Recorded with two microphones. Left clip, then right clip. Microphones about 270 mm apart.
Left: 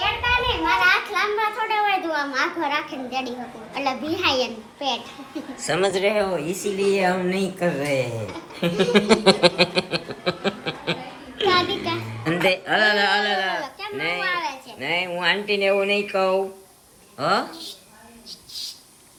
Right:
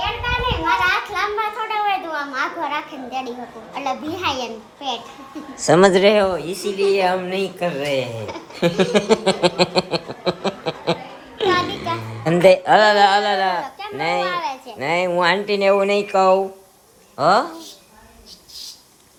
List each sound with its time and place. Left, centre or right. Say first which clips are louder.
0.0 s children playing: left 1 dB; centre
3.8 s speech: even; centre
5.6 s speech: right 8 dB; right
6.3 s speech: right 2 dB; centre
8.9 s a sound: even; centre
12.5 s speech: right 7 dB; centre